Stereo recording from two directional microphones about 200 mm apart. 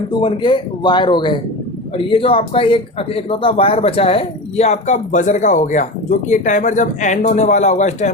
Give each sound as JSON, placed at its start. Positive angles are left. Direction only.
{"t": 0.1, "sound": "speech", "side_deg": 25}